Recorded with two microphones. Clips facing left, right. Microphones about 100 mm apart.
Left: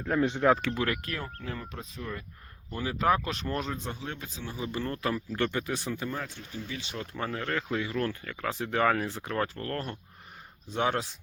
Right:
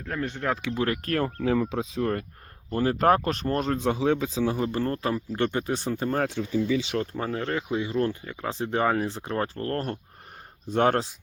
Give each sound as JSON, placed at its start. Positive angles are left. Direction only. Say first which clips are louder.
{"t": 0.0, "sound": "speech", "louder": "left 4 dB", "side_deg": 15}
{"t": 0.8, "sound": "speech", "louder": "right 4 dB", "side_deg": -30}
{"t": 1.2, "sound": "speech", "louder": "right 13 dB", "side_deg": -90}
{"t": 2.6, "sound": "speech", "louder": "right 6 dB", "side_deg": -45}
{"t": 3.7, "sound": "a man's voice", "louder": "right 13 dB", "side_deg": -80}
{"t": 4.6, "sound": "speech", "louder": "right 6 dB", "side_deg": -40}
{"t": 5.0, "sound": "speech", "louder": "right 3 dB", "side_deg": -30}
{"t": 6.1, "sound": "a man's voice", "louder": "right 12 dB", "side_deg": -90}
{"t": 7.0, "sound": "speech", "louder": "right 5 dB", "side_deg": -35}
{"t": 7.5, "sound": "speech", "louder": "right 4 dB", "side_deg": -20}